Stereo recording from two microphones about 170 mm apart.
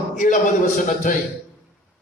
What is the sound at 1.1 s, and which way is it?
Speech, 50° left (ahead or behind).